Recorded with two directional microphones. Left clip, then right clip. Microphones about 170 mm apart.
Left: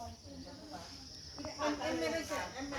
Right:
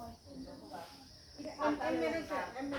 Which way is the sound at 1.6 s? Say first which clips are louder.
Right 2 dB; 65° left (ahead or behind).